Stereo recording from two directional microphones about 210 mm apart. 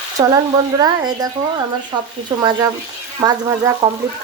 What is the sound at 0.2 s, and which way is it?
Speech, 20° right (ahead or behind).